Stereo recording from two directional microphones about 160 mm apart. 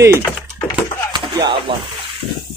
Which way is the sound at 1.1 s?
30° right (ahead or behind).